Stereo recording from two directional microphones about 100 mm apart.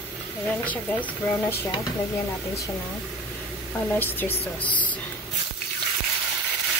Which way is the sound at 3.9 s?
20° left (ahead or behind).